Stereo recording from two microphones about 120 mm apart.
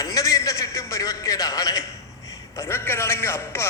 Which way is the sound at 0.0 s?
30° left (ahead or behind).